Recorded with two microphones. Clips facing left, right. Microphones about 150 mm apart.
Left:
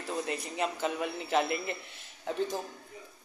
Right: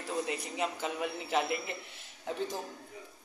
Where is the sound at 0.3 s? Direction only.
5° right (ahead or behind).